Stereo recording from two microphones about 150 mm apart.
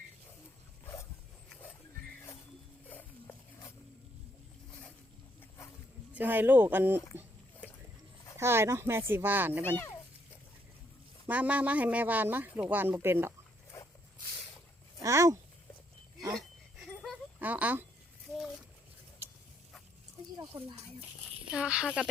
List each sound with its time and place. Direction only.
2.9 s a sound: 10° left (ahead or behind)
6.1 s speech: 10° right (ahead or behind)
8.4 s speech: 15° right (ahead or behind)
9.6 s a child's voice: 15° left (ahead or behind)
11.3 s speech: 10° right (ahead or behind)
13.7 s dog: 20° left (ahead or behind)
15.0 s speech: 20° right (ahead or behind)
16.3 s a sound: centre (ahead or behind)
17.4 s speech: 10° right (ahead or behind)
20.4 s speech: 15° right (ahead or behind)
21.5 s speech: 5° right (ahead or behind)